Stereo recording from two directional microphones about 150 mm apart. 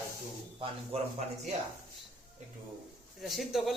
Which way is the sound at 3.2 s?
Centre (ahead or behind).